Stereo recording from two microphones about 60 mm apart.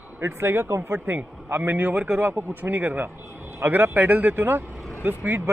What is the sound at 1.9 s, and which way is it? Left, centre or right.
Speech, centre.